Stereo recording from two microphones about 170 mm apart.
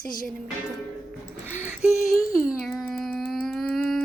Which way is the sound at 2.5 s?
Centre (ahead or behind).